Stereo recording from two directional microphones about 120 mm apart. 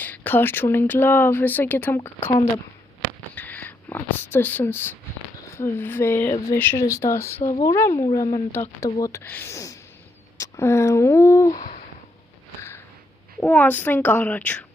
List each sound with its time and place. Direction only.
0.0 s speech: 15° left (ahead or behind)
3.3 s speech: 15° left (ahead or behind); by 8.4 s 30° left (ahead or behind)
8.5 s speech: 20° left (ahead or behind)
9.2 s speech: 15° left (ahead or behind)
11.5 s a sound: 90° left
13.4 s speech: 15° left (ahead or behind)